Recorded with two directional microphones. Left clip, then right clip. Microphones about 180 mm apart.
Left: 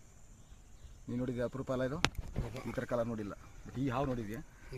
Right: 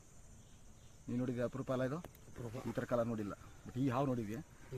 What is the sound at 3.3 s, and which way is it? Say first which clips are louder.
Speech: left 1 dB; 10° left (ahead or behind).